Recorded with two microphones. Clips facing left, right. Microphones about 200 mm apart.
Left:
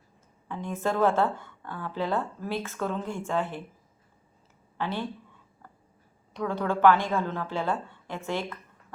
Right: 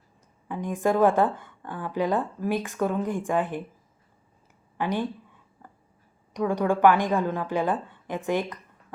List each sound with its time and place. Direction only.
0.4 s speech: 15° right (ahead or behind)
4.8 s speech: 15° right (ahead or behind)
6.3 s speech: 15° right (ahead or behind)